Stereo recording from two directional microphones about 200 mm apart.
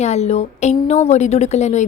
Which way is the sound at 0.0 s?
35° left (ahead or behind).